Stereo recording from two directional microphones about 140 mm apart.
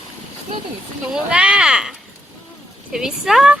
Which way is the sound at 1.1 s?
5° right (ahead or behind).